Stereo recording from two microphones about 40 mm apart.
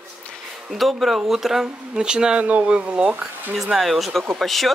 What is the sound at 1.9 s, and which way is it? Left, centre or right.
Speech, right.